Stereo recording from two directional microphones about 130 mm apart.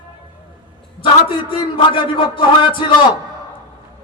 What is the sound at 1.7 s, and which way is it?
A man's voice, 40° left (ahead or behind).